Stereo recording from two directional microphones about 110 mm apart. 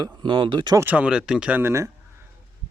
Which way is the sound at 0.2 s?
45° right (ahead or behind).